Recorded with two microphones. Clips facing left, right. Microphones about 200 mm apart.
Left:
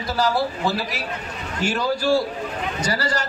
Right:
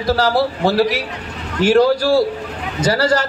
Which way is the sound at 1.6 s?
90° right.